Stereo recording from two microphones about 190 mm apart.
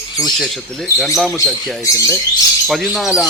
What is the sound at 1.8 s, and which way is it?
Speech, 15° left (ahead or behind).